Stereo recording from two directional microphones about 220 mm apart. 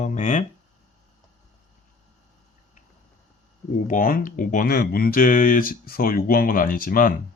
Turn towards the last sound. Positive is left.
turn(degrees=40)  # may be behind; listen again after turning